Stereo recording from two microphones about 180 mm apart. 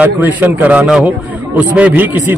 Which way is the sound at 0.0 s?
10° right (ahead or behind).